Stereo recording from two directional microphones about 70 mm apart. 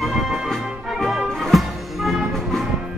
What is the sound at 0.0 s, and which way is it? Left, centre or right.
Music, centre.